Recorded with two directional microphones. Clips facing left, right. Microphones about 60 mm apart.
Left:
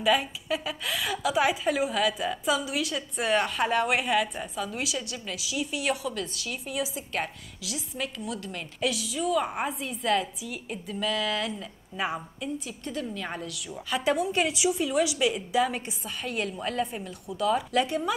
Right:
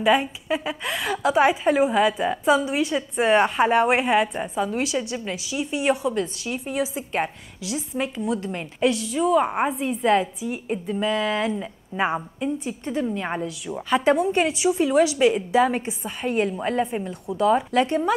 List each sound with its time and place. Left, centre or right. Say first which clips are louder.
0.0 s a woman's voice: right 5 dB; right